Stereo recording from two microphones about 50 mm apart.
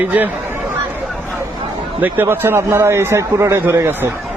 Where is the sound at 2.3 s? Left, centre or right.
Right.